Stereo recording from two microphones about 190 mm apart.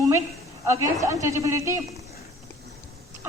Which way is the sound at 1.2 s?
15° right (ahead or behind).